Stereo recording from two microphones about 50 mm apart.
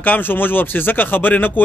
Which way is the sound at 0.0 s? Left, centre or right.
Left.